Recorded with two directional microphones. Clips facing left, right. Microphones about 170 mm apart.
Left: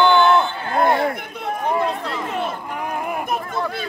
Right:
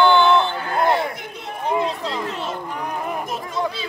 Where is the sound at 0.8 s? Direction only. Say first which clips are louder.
Left 2 dB; 55° left (ahead or behind).